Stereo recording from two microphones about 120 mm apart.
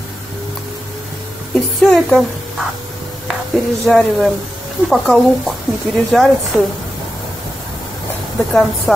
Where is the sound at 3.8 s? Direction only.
Centre (ahead or behind).